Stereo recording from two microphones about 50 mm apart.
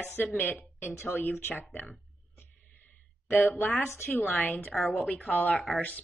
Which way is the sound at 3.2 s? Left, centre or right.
Left.